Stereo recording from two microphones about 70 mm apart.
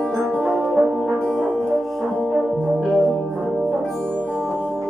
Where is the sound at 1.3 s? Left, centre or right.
Centre.